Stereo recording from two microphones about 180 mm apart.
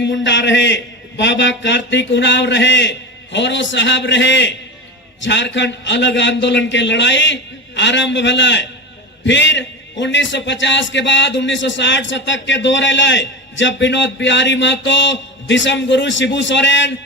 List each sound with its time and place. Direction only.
0.0 s a man's voice: 85° left